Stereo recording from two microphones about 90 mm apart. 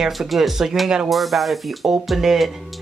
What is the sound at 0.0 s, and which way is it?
Speech, centre (ahead or behind).